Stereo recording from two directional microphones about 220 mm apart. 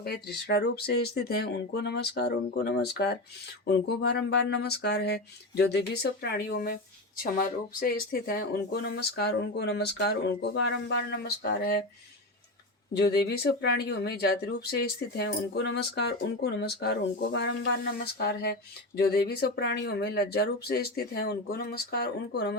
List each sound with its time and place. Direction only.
0.0 s speech: 45° left (ahead or behind)
12.9 s speech: 45° left (ahead or behind)